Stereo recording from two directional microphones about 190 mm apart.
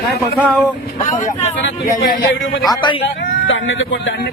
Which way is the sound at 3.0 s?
90° left.